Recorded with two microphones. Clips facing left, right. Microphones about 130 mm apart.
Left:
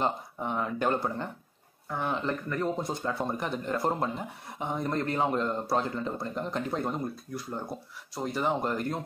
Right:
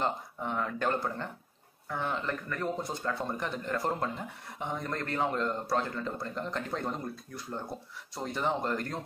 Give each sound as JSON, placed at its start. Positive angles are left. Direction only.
{"t": 0.0, "sound": "speech", "side_deg": 15}